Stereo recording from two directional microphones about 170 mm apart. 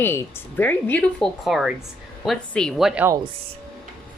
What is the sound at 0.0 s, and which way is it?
Speech, 10° left (ahead or behind).